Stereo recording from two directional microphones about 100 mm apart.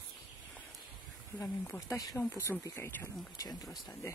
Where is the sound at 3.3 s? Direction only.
40° left (ahead or behind).